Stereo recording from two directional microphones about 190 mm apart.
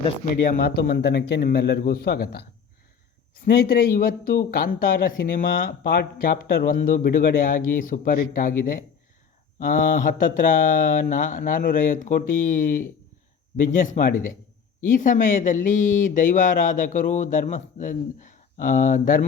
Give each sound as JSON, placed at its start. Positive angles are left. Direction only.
{"t": 0.5, "sound": "a man's voice", "side_deg": 55}
{"t": 3.4, "sound": "speech", "side_deg": 55}